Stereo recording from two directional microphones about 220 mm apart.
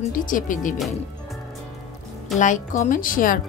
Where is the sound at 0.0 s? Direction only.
35° left (ahead or behind).